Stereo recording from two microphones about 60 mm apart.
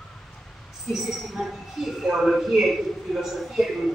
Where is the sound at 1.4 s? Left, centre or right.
Centre.